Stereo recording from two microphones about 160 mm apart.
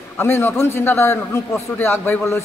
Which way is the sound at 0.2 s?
15° left (ahead or behind).